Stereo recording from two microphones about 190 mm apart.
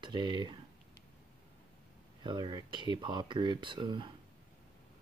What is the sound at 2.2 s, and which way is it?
Speech, 25° right (ahead or behind).